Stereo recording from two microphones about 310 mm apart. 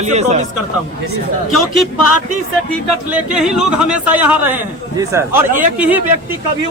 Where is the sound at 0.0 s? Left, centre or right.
Right.